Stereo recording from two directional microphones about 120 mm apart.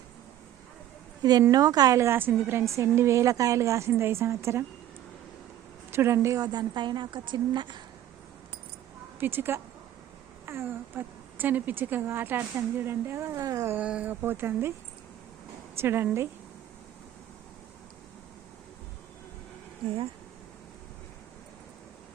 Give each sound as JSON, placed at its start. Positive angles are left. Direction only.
{"t": 1.2, "sound": "a woman's voice", "side_deg": -30}
{"t": 5.9, "sound": "a woman's voice", "side_deg": -20}
{"t": 9.2, "sound": "speech", "side_deg": -20}
{"t": 13.7, "sound": "speech", "side_deg": -10}
{"t": 15.8, "sound": "speech", "side_deg": -20}